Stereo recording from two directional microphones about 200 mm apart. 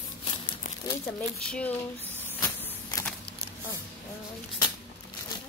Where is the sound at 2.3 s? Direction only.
10° left (ahead or behind).